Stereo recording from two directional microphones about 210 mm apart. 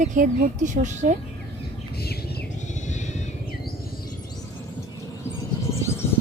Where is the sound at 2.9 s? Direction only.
35° left (ahead or behind).